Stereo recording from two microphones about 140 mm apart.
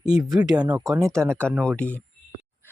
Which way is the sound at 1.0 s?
5° left (ahead or behind).